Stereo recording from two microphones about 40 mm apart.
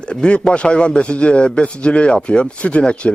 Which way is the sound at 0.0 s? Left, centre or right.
Left.